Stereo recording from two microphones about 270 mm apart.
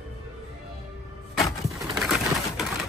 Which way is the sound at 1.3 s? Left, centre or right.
Centre.